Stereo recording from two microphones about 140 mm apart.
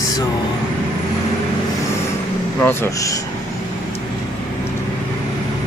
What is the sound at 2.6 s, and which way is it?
Speech, 20° left (ahead or behind).